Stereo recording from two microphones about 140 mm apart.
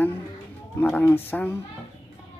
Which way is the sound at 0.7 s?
15° left (ahead or behind).